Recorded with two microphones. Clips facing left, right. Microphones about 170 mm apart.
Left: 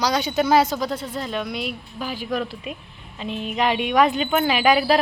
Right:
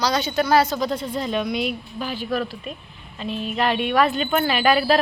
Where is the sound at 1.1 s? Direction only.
Centre (ahead or behind).